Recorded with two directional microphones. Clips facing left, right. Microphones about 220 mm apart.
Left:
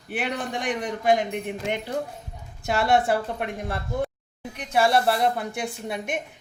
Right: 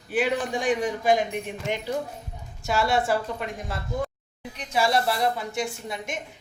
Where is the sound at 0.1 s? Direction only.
60° left (ahead or behind).